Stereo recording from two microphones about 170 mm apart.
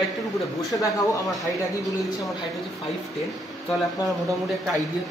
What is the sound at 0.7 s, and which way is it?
Speech, 20° left (ahead or behind).